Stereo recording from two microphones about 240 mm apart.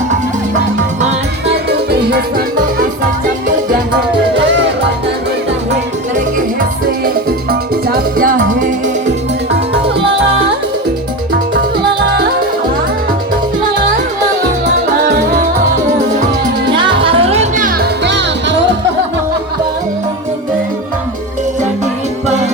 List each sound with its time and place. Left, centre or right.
1.7 s music: right
4.4 s music: right
7.9 s music: right
16.6 s music: centre; by 18.5 s right